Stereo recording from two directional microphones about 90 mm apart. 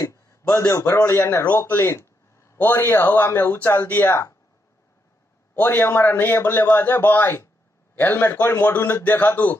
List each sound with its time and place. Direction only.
0.0 s a man's voice: 35° left (ahead or behind)
4.1 s speech: 35° left (ahead or behind)
5.6 s a man's voice: 25° left (ahead or behind)